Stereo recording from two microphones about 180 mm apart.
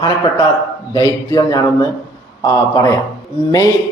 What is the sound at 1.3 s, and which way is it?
Speech, 20° left (ahead or behind).